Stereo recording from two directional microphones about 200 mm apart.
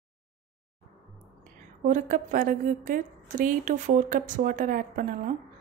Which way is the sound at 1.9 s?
40° right (ahead or behind).